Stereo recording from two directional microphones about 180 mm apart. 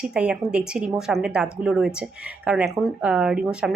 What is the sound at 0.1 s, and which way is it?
A woman's voice, 5° right (ahead or behind).